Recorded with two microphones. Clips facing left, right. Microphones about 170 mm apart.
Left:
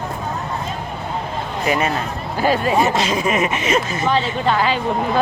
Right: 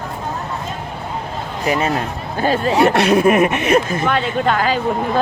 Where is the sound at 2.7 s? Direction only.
65° right (ahead or behind); by 4.8 s 50° right (ahead or behind).